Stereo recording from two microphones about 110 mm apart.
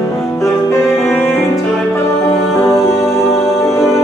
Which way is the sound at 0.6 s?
25° left (ahead or behind).